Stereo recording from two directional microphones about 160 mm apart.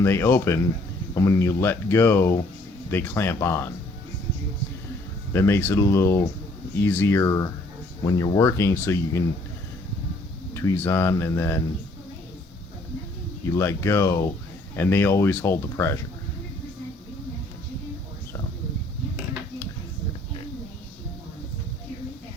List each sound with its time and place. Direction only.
0.0 s speech: 15° left (ahead or behind)
5.3 s speech: 15° left (ahead or behind)
10.5 s speech: 15° left (ahead or behind)
13.6 s speech: 15° left (ahead or behind)